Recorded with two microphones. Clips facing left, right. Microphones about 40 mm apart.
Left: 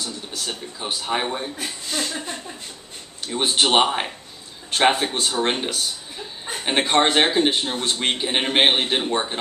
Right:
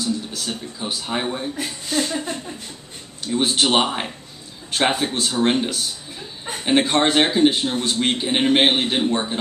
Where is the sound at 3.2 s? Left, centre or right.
Centre.